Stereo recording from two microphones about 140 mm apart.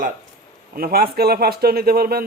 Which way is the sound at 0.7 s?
90° right.